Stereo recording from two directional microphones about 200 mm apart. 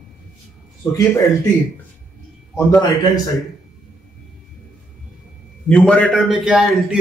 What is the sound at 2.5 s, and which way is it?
Speech, 15° left (ahead or behind).